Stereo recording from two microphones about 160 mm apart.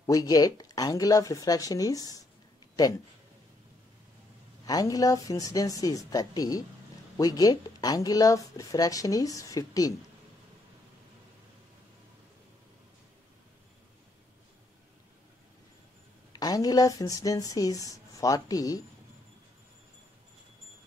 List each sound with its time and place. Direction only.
0.0 s speech: 20° left (ahead or behind)
4.6 s speech: 20° left (ahead or behind)
16.3 s speech: 25° left (ahead or behind)